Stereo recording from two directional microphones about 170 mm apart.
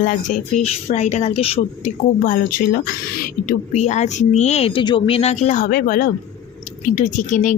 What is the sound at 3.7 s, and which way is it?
Speech, 40° left (ahead or behind).